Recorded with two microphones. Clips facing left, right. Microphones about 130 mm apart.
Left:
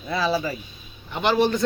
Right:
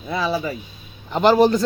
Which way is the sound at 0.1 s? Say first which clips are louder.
Right 1 dB; 15° right (ahead or behind).